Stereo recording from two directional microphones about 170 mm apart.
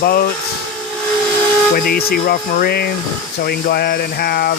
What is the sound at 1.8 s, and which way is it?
Speech, 60° left (ahead or behind).